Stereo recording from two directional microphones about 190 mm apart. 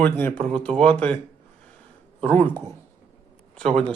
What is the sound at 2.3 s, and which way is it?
Speech, 25° right (ahead or behind).